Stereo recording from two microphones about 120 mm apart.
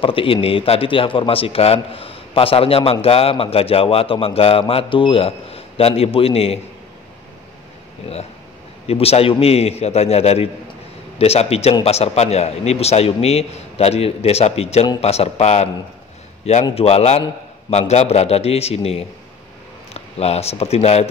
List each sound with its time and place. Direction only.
0.0 s a man's voice: 50° left (ahead or behind)
8.8 s a man's voice: 55° left (ahead or behind)
16.7 s a man's voice: 60° left (ahead or behind)